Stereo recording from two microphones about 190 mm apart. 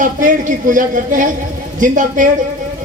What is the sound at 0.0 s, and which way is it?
Speech, 45° right (ahead or behind).